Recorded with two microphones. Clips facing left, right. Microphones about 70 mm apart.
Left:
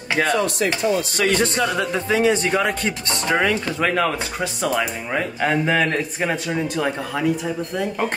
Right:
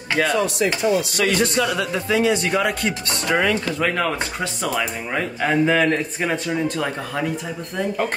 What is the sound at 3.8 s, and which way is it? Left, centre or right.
Speech, centre.